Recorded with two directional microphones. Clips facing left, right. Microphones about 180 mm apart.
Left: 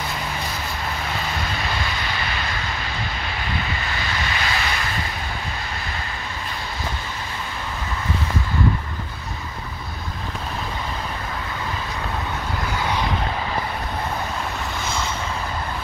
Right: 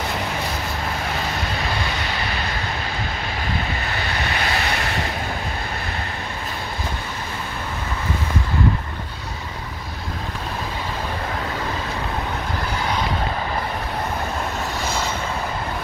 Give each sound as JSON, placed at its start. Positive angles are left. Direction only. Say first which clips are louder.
{"t": 4.4, "sound": "vehicle", "louder": "right 3 dB", "side_deg": -50}